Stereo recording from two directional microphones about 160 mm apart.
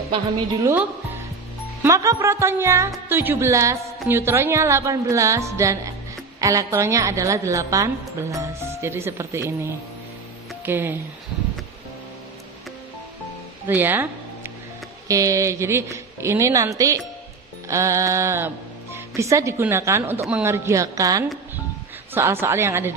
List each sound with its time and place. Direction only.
1.8 s a woman's voice: 20° right (ahead or behind)
13.7 s music: 10° right (ahead or behind)
15.0 s a woman's voice: 20° right (ahead or behind)